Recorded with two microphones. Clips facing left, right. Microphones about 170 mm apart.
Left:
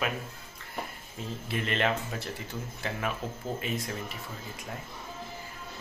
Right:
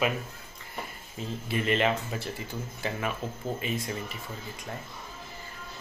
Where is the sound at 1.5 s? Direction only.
5° right (ahead or behind).